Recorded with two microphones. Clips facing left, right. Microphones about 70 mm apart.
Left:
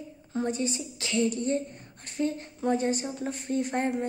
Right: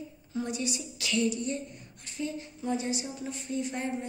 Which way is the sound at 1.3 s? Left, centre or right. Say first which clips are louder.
Left 4 dB; left.